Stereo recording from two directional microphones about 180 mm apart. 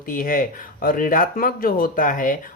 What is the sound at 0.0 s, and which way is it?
Speech, 50° left (ahead or behind).